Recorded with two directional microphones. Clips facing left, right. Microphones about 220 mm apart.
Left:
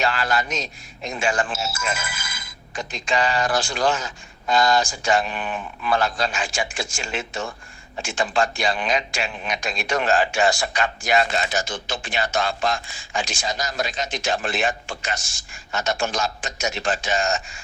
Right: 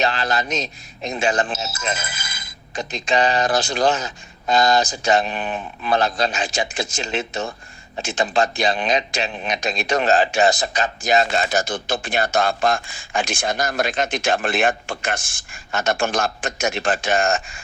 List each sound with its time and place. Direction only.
0.0 s a man's voice: 20° right (ahead or behind)
11.5 s speech: 55° right (ahead or behind)